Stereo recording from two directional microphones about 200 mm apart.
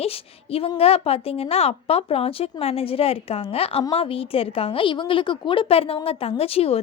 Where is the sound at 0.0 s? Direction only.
30° left (ahead or behind).